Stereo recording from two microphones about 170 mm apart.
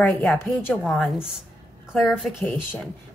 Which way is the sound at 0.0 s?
Centre (ahead or behind).